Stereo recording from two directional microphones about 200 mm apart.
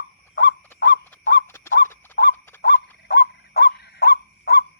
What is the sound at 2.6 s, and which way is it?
Dog, 55° left (ahead or behind).